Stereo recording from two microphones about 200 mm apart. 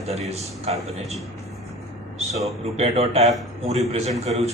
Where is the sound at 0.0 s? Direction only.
30° right (ahead or behind).